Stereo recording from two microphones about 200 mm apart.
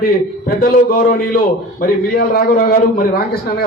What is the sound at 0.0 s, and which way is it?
A man's voice, 45° left (ahead or behind).